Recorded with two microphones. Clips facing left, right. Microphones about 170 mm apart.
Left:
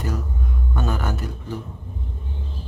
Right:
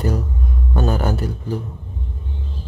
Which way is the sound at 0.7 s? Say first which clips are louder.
Right 6 dB; 35° right (ahead or behind).